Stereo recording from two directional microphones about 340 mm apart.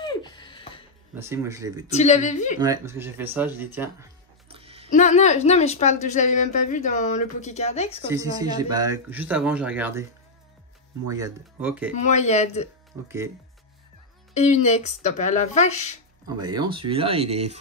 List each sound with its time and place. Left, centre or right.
0.0 s music: centre
1.1 s speech: centre
1.9 s a woman's voice: centre
2.6 s speech: centre
4.9 s a woman's voice: left
8.1 s speech: centre
11.1 s speech: centre
11.9 s a woman's voice: left
14.3 s a woman's voice: centre
16.3 s speech: centre